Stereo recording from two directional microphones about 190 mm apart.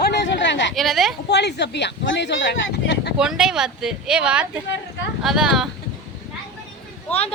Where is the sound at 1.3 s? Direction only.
65° left (ahead or behind).